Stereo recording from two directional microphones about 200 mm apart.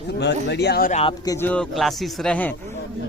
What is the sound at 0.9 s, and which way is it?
Speech, 30° left (ahead or behind).